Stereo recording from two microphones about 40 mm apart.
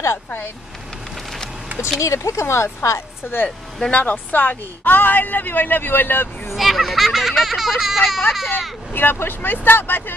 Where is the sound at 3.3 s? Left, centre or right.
Left.